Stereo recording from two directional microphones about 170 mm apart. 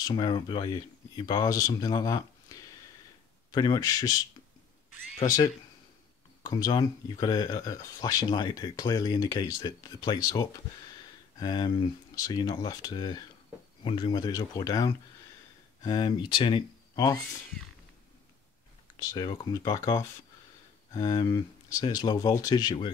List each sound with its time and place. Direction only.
0.0 s speech: 25° left (ahead or behind)
3.5 s speech: 25° left (ahead or behind)
5.2 s speech: 20° left (ahead or behind)
18.9 s speech: 25° left (ahead or behind)